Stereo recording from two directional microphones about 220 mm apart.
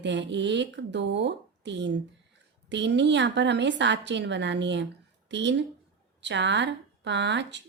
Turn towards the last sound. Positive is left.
turn(degrees=-55)  # may be behind; listen again after turning